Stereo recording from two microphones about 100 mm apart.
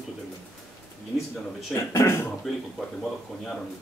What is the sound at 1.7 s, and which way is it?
Speech, 30° left (ahead or behind).